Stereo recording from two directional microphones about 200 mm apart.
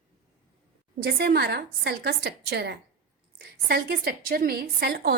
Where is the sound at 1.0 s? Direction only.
50° right (ahead or behind).